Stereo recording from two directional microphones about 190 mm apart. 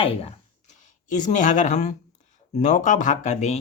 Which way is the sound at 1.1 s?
40° left (ahead or behind).